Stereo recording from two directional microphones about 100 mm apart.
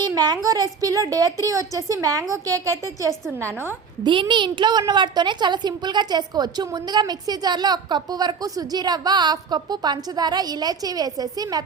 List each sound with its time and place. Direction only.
0.0 s a woman's voice: 40° right (ahead or behind)
4.0 s a woman's voice: 55° right (ahead or behind)